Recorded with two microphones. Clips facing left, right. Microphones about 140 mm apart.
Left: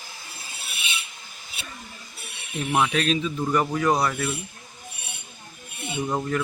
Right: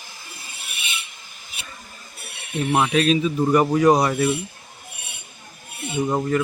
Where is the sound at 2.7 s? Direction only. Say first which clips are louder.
Right 4 dB; 10° right (ahead or behind).